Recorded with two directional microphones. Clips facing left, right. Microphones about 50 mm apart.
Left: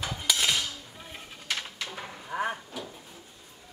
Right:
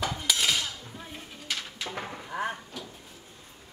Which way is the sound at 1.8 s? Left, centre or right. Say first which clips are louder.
Right 2 dB; right.